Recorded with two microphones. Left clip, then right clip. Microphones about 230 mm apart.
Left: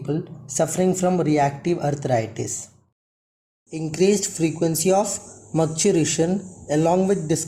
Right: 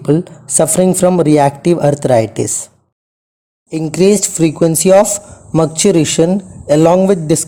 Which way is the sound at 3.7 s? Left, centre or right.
Right.